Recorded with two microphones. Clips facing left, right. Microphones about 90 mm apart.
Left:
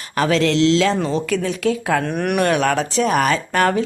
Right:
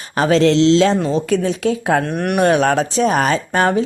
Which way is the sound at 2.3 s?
30° right (ahead or behind).